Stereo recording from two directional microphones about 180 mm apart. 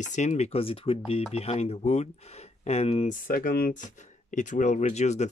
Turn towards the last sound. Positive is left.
turn(degrees=40)  # may be behind; listen again after turning